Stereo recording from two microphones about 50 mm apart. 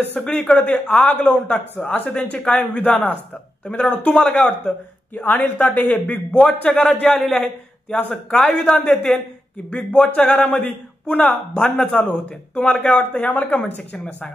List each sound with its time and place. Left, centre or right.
0.1 s speech: left
5.1 s a man's voice: left
11.5 s speech: left